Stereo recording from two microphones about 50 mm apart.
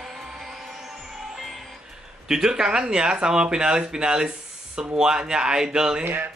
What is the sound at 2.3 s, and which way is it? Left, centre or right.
Speech, centre.